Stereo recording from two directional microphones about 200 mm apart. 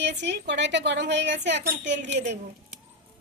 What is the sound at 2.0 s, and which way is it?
Speech, 35° right (ahead or behind).